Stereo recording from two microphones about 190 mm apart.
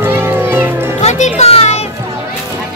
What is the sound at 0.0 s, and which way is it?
Music, 10° right (ahead or behind).